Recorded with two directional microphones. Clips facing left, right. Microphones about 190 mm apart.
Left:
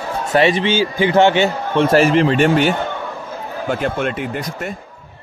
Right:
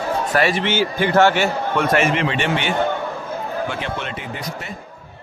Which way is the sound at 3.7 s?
50° left (ahead or behind).